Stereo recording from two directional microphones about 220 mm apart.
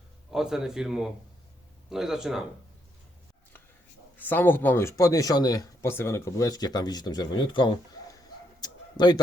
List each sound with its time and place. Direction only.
0.3 s a man's voice: centre (ahead or behind)
4.2 s speech: 10° left (ahead or behind)
8.6 s a sound: 20° left (ahead or behind)